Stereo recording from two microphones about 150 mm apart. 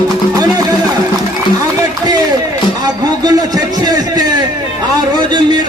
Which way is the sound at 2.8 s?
25° right (ahead or behind).